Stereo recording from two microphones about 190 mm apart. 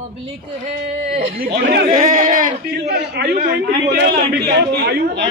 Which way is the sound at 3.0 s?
60° right (ahead or behind).